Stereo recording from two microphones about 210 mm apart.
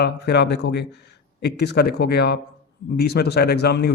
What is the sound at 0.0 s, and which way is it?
A man's voice, 55° left (ahead or behind).